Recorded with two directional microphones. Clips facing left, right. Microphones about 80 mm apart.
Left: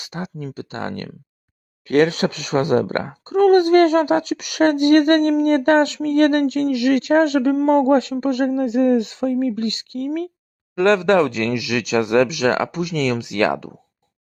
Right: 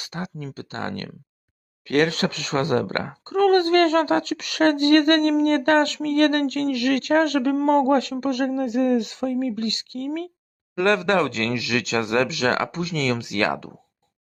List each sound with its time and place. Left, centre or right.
0.0 s speech: centre
7.5 s speech: centre
7.9 s speech: left